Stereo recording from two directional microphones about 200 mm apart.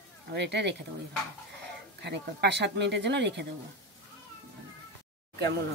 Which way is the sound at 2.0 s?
60° right (ahead or behind).